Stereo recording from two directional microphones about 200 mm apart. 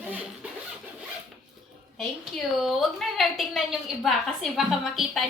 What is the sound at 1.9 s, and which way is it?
A woman's voice, centre (ahead or behind).